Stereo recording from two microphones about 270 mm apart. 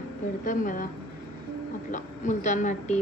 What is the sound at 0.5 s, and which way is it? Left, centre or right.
Speech, left.